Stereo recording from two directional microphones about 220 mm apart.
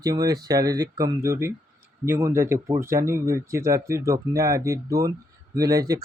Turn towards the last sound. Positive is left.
turn(degrees=-15)  # may be behind; listen again after turning